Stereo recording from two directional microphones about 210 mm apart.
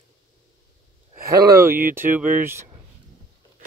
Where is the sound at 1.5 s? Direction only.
15° right (ahead or behind).